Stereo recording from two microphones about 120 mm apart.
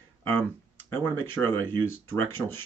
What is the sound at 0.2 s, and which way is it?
Speech, 15° left (ahead or behind).